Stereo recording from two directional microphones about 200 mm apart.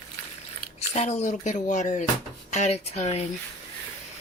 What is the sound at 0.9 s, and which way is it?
Speech, 35° left (ahead or behind).